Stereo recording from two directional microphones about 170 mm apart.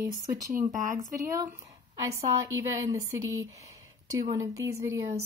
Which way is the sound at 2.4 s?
20° right (ahead or behind).